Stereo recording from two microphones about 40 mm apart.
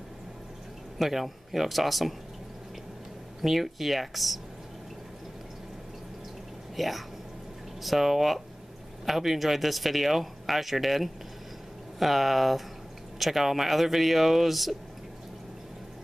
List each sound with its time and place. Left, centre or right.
0.9 s speech: centre
3.4 s speech: centre
6.8 s speech: centre